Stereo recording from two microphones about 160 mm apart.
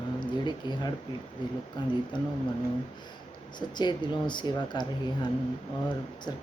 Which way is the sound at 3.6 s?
25° left (ahead or behind).